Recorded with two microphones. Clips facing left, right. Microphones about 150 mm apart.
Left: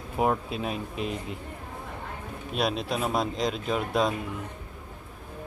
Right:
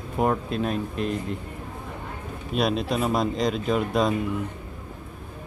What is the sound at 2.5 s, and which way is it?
Speech, centre (ahead or behind).